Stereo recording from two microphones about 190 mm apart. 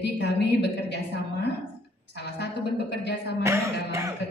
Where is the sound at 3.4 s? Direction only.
15° right (ahead or behind).